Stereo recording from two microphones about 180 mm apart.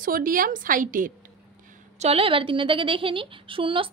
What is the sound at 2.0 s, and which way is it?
A woman's voice, 35° right (ahead or behind).